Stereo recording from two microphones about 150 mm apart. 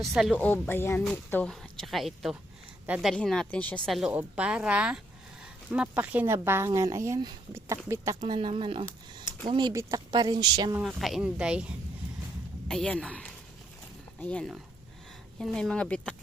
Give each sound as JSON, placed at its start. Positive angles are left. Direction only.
{"t": 0.0, "sound": "speech", "side_deg": -5}
{"t": 0.3, "sound": "speech", "side_deg": 10}
{"t": 4.1, "sound": "speech", "side_deg": -10}
{"t": 10.8, "sound": "speech", "side_deg": 0}
{"t": 12.6, "sound": "speech", "side_deg": 5}